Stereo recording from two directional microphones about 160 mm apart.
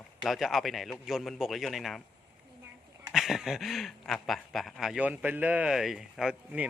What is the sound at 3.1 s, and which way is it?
Speech, centre (ahead or behind).